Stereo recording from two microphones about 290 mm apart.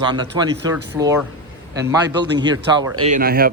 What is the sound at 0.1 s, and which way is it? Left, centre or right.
Speech, centre.